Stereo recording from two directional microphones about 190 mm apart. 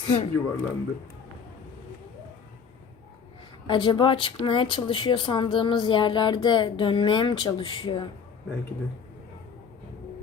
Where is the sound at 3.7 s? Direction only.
25° left (ahead or behind).